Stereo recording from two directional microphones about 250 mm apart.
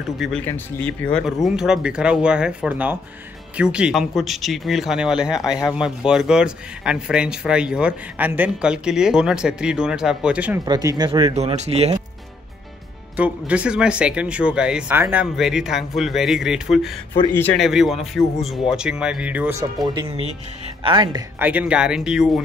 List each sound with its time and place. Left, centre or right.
0.0 s a man's voice: centre; by 12.0 s right
13.1 s a man's voice: centre
17.1 s a man's voice: centre
19.9 s a man's voice: centre